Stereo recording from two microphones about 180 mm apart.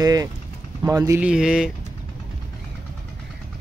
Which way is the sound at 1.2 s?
5° right (ahead or behind).